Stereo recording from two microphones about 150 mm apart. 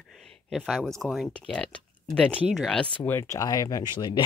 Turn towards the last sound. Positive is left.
turn(degrees=30)  # may be behind; listen again after turning